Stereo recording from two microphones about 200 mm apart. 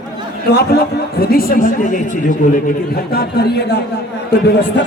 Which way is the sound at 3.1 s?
55° left (ahead or behind).